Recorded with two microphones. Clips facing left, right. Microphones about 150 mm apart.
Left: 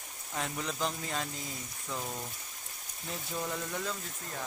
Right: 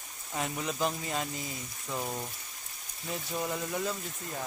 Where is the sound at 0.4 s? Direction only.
10° right (ahead or behind).